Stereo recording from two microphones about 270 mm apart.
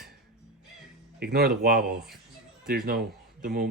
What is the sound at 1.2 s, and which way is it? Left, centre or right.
Speech, right.